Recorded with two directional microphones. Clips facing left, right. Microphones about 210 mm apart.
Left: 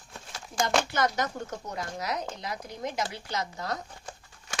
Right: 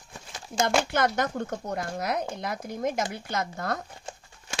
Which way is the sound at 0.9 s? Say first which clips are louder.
Right 3 dB; 55° right (ahead or behind).